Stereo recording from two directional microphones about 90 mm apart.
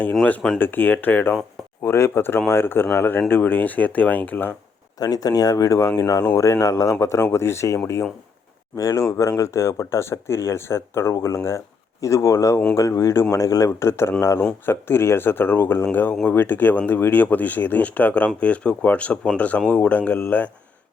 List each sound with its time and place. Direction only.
0.6 s speech: 20° left (ahead or behind)
4.9 s speech: 45° left (ahead or behind); by 20.5 s 20° left (ahead or behind)